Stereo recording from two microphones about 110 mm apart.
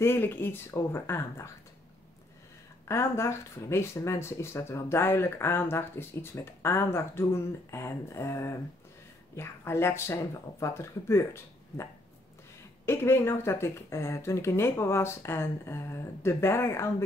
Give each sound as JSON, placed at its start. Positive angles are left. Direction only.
{"t": 0.0, "sound": "speech", "side_deg": 20}
{"t": 2.9, "sound": "speech", "side_deg": 25}
{"t": 12.8, "sound": "speech", "side_deg": 20}